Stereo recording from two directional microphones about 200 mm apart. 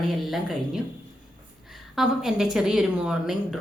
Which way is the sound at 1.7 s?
Centre (ahead or behind).